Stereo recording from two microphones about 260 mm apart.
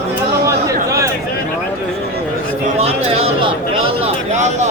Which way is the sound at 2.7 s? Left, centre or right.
Right.